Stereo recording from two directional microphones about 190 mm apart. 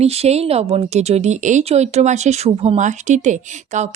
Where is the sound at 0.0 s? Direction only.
35° right (ahead or behind).